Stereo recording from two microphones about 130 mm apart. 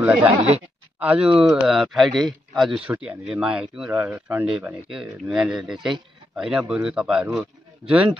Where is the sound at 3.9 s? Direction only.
15° right (ahead or behind).